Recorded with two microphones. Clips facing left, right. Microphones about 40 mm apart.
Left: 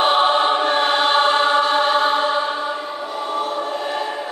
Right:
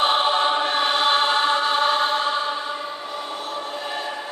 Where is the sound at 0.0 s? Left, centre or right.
Centre.